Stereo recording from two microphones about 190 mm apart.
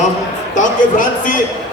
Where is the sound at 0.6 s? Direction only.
45° left (ahead or behind).